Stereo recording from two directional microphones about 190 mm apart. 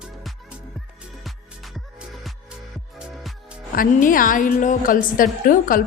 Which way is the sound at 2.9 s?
Centre (ahead or behind).